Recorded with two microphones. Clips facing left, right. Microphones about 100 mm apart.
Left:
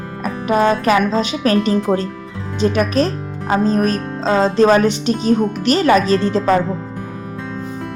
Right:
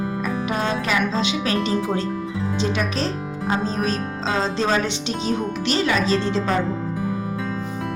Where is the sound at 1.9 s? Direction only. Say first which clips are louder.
Left 7 dB; 90° left.